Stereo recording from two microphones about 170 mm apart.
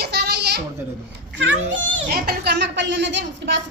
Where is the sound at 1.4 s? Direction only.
90° right.